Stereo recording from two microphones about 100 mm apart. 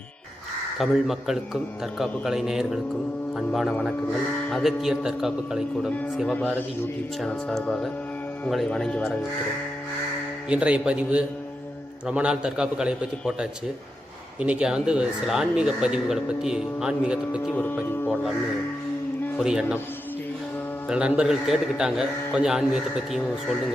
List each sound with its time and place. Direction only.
0.8 s a man's voice: 5° right (ahead or behind)
7.3 s a man's voice: 5° left (ahead or behind)
10.5 s speech: 10° right (ahead or behind)
17.5 s speech: 20° left (ahead or behind)
19.4 s speech: 5° right (ahead or behind)
20.8 s a man's voice: 10° right (ahead or behind)